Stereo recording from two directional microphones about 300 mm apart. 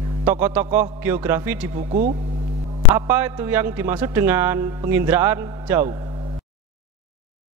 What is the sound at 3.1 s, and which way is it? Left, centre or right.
A man's voice, centre.